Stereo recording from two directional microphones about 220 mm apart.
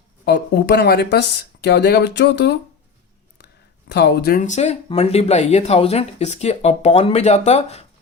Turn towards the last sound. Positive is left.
turn(degrees=30)  # may be behind; listen again after turning